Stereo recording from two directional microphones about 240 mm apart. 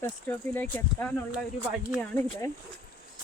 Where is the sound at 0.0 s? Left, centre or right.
Centre.